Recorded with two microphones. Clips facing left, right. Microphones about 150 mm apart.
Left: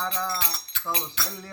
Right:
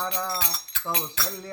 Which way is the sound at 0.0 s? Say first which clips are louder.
Even; 15° right (ahead or behind).